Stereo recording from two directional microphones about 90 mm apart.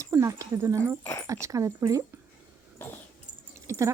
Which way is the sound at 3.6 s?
35° right (ahead or behind).